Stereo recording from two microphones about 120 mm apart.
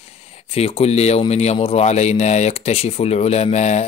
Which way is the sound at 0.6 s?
55° left (ahead or behind).